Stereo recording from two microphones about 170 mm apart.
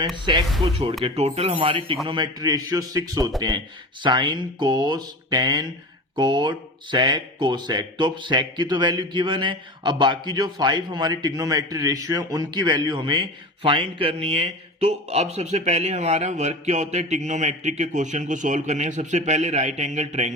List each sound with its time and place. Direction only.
0.6 s speech: 35° right (ahead or behind)